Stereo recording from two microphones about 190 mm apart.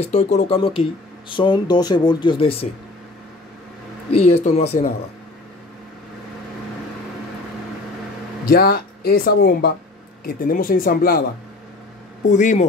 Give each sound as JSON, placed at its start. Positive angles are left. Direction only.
{"t": 0.0, "sound": "speech", "side_deg": 35}
{"t": 4.1, "sound": "speech", "side_deg": 35}
{"t": 8.5, "sound": "speech", "side_deg": 55}
{"t": 12.3, "sound": "speech", "side_deg": 40}